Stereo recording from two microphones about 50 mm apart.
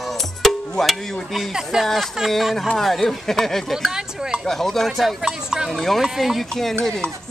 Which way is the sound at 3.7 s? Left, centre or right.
Centre.